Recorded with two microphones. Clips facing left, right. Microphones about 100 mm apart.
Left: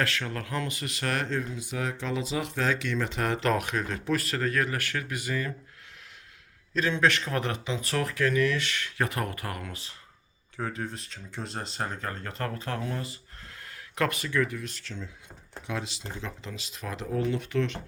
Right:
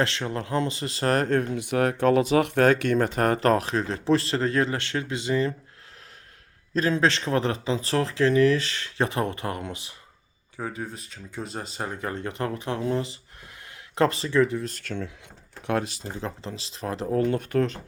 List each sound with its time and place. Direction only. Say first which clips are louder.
0.0 s speech: right 4 dB; 25° right (ahead or behind)
1.3 s speech: right 8 dB; 60° right (ahead or behind); by 5.5 s 25° right (ahead or behind)
6.7 s speech: right 3 dB; 35° right (ahead or behind); by 9.9 s 20° right (ahead or behind)
10.6 s speech: right 1 dB; 5° right (ahead or behind); by 14.7 s 30° right (ahead or behind)
14.7 s speech: right 8 dB; 55° right (ahead or behind); by 17.2 s 35° right (ahead or behind)
17.2 s speech: right 4 dB; 50° right (ahead or behind)